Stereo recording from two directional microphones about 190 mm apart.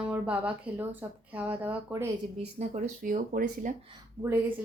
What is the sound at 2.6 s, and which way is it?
Speech, 40° right (ahead or behind).